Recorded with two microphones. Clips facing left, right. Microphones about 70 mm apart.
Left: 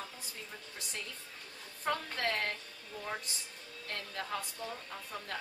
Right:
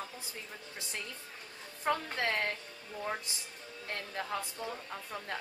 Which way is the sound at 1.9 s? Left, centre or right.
Right.